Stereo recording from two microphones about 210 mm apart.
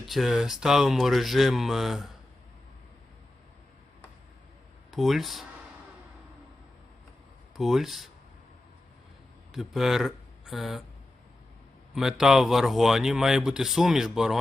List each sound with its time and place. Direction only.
0.1 s speech: centre (ahead or behind)
4.9 s speech: centre (ahead or behind)
7.5 s speech: centre (ahead or behind)
9.5 s speech: centre (ahead or behind)
11.9 s speech: centre (ahead or behind)